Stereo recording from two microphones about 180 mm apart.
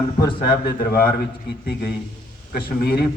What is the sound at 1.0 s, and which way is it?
A man's voice, 60° left (ahead or behind).